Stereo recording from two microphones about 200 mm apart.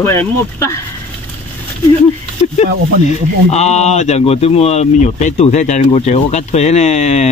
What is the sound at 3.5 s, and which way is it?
Speech, 35° left (ahead or behind).